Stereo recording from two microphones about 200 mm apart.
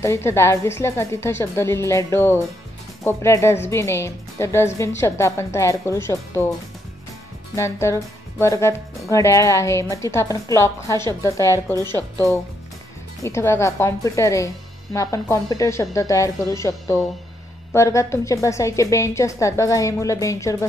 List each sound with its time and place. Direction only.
0.0 s speech: 15° left (ahead or behind)
7.5 s speech: 15° left (ahead or behind)
13.2 s speech: 15° left (ahead or behind)